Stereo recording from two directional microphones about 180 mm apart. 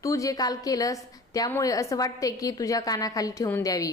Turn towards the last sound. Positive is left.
turn(degrees=15)  # may be behind; listen again after turning